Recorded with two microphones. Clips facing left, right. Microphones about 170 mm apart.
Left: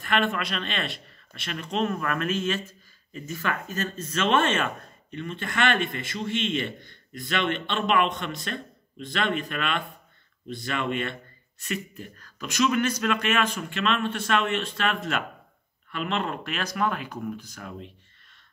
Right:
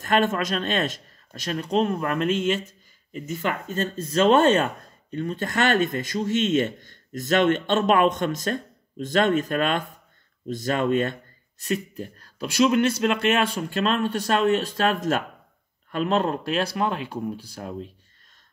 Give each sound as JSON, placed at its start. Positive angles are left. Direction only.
{"t": 0.0, "sound": "speech", "side_deg": -45}